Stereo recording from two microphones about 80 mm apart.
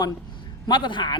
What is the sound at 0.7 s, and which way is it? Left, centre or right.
Speech, left.